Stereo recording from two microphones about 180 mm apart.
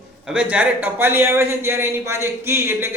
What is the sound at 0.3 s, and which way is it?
A man's voice, 5° right (ahead or behind).